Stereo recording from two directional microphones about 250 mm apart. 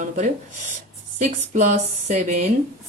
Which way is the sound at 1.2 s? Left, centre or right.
Right.